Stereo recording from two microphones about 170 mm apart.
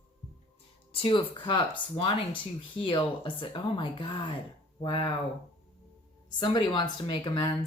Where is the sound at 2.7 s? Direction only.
30° left (ahead or behind).